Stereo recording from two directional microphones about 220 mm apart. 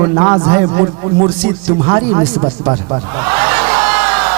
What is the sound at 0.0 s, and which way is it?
Speech, 25° right (ahead or behind).